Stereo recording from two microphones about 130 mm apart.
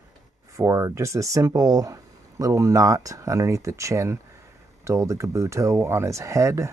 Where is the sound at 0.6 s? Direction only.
25° right (ahead or behind).